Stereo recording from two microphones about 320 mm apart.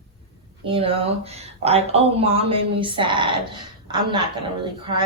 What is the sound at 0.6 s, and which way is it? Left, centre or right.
Speech, centre.